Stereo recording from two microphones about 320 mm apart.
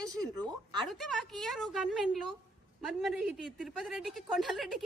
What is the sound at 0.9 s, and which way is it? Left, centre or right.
A woman's voice, centre.